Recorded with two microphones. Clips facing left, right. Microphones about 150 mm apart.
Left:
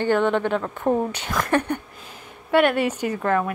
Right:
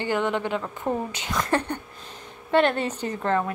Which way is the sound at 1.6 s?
10° left (ahead or behind).